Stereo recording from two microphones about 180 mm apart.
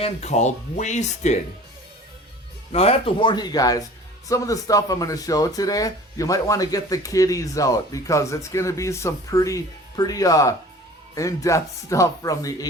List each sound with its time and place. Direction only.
0.0 s speech: 40° left (ahead or behind)
2.7 s speech: 35° left (ahead or behind)